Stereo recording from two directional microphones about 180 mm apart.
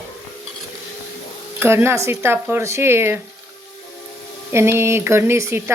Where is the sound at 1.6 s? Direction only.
15° right (ahead or behind).